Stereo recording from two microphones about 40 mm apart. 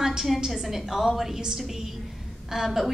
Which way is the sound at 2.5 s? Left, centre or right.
Centre.